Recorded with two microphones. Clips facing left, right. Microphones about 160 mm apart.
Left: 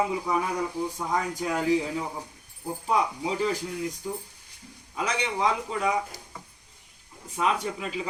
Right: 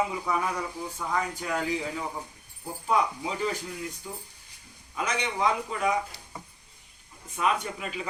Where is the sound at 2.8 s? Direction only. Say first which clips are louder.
Even; 35° left (ahead or behind).